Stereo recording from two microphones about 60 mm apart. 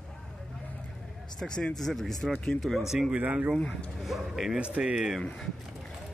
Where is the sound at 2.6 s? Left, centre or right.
Centre.